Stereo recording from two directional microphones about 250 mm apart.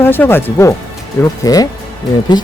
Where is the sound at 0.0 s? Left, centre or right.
Centre.